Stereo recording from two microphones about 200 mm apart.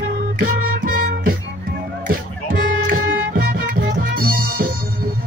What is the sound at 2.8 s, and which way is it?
Music, 45° right (ahead or behind).